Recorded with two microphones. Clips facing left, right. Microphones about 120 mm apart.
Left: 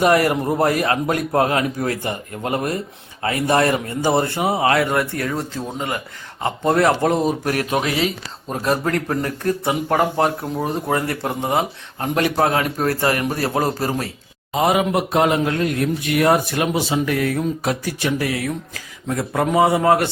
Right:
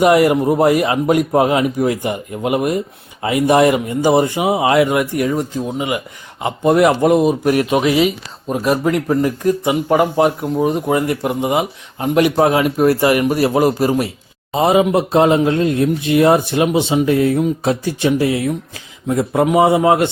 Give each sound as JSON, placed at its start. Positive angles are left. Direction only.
{"t": 0.0, "sound": "speech", "side_deg": -15}
{"t": 14.5, "sound": "speech", "side_deg": -25}